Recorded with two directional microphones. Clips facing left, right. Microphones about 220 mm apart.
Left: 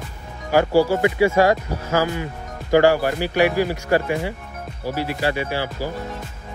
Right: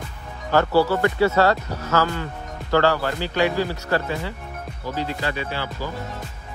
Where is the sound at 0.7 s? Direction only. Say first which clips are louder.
Left 2 dB; 45° left (ahead or behind).